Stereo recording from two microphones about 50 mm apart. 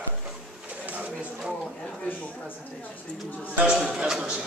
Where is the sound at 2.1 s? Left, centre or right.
Left.